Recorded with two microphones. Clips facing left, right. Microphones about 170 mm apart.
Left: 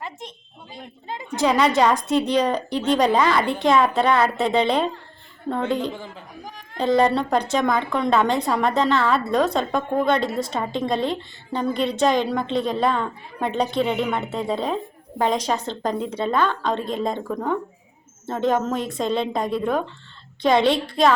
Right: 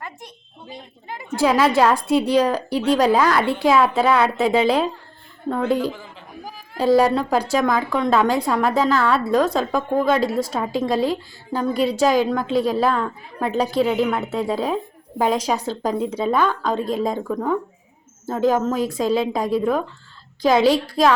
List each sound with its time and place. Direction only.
0.0 s a sound: 20° left (ahead or behind)
1.0 s a woman's voice: 20° left (ahead or behind)
1.4 s a woman's voice: 5° right (ahead or behind)